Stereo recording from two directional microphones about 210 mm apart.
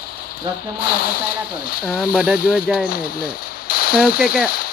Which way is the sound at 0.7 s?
45° left (ahead or behind).